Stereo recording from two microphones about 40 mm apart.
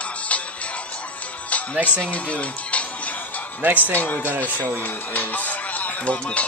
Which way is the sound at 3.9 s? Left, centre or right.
Left.